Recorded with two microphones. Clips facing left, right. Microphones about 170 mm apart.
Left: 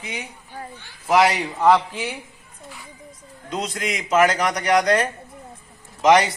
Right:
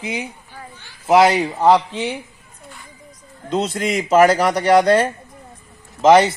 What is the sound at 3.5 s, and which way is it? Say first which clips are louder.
A man's voice: right 7 dB; 30° right (ahead or behind).